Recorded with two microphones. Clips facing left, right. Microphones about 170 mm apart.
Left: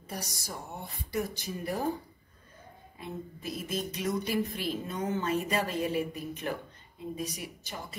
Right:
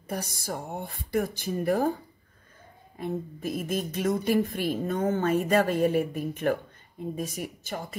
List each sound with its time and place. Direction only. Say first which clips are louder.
0.1 s a woman's voice: right 7 dB; 55° right (ahead or behind)
3.0 s a woman's voice: right 8 dB; 50° right (ahead or behind)